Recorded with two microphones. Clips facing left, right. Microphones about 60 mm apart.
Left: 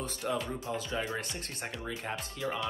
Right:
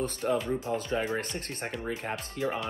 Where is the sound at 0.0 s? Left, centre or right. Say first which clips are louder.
Right 5 dB; right.